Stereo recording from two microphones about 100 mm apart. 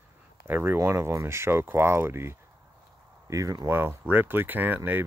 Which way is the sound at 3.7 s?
20° right (ahead or behind).